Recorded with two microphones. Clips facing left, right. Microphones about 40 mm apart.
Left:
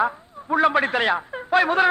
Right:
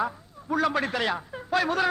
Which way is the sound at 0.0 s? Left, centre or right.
Left.